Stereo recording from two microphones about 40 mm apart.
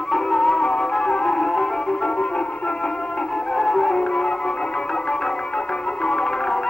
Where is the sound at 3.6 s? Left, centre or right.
Centre.